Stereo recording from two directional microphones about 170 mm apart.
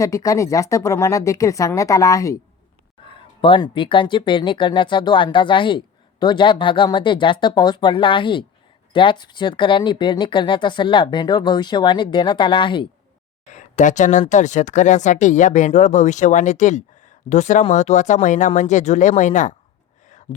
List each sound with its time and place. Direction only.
0.0 s speech: 20° left (ahead or behind)
3.1 s speech: 30° left (ahead or behind)
13.5 s speech: 45° left (ahead or behind)